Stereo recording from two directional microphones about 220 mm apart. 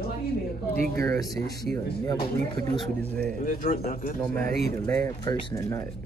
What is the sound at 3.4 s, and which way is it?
Speech, 40° left (ahead or behind).